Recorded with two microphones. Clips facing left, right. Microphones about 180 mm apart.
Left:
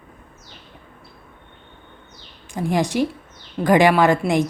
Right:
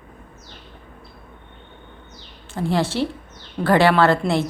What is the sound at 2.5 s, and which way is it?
A woman's voice, 15° left (ahead or behind).